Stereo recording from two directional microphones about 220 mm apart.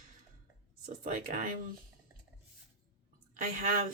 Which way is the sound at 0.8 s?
35° right (ahead or behind).